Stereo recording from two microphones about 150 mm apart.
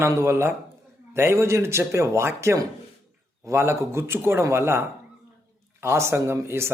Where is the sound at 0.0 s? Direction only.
15° right (ahead or behind).